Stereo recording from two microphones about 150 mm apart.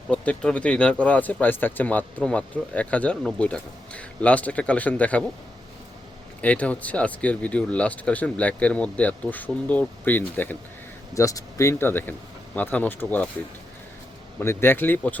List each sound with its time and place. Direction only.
0.1 s speech: 5° left (ahead or behind)
6.4 s speech: 10° left (ahead or behind)
14.3 s speech: 15° left (ahead or behind)